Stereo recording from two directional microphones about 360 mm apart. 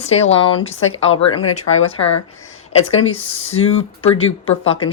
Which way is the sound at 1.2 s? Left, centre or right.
Left.